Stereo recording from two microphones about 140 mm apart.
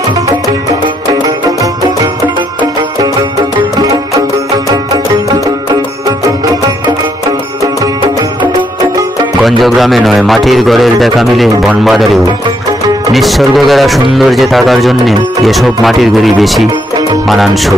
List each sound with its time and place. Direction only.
7.6 s music: 25° right (ahead or behind)
9.4 s a man's voice: centre (ahead or behind)